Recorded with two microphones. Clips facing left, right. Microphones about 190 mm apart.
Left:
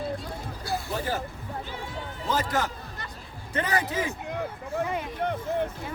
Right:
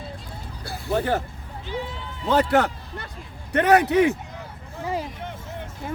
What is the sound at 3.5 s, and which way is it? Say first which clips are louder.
Speech: right 10 dB; 65° right (ahead or behind).